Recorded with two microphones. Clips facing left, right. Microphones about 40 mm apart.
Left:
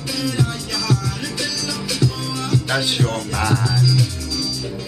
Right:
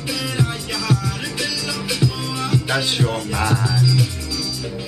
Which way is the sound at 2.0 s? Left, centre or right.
Centre.